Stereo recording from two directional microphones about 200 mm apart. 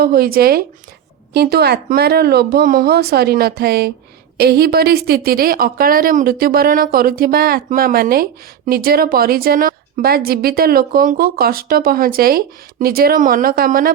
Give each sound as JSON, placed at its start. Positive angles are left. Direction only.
{"t": 0.0, "sound": "a woman's voice", "side_deg": -50}